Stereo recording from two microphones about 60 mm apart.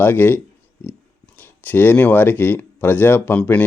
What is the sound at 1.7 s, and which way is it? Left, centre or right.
Speech, left.